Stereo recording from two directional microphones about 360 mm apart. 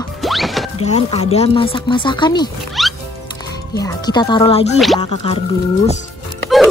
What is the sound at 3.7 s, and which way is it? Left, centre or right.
Speech, centre.